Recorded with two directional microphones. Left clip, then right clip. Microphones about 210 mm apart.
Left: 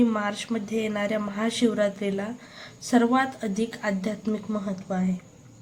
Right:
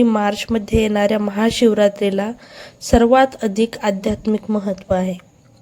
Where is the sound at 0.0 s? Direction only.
40° right (ahead or behind).